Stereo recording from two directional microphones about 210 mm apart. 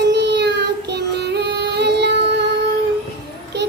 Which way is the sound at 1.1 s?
55° right (ahead or behind).